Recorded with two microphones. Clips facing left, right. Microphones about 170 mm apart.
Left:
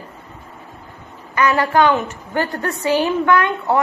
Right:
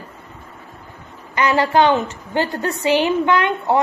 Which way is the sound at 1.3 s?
20° right (ahead or behind).